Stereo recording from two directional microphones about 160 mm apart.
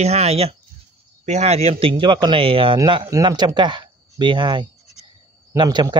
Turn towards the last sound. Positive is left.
turn(degrees=-30)  # may be behind; listen again after turning